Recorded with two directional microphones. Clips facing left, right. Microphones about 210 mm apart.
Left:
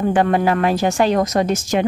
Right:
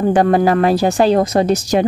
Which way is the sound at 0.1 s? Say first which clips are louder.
Right 5 dB; 40° right (ahead or behind).